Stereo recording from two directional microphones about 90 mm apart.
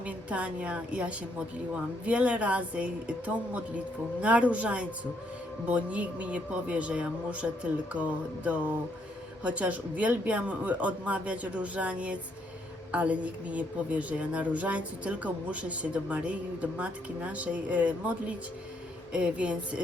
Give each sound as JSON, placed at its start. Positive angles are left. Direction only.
{"t": 0.0, "sound": "a woman's voice", "side_deg": -15}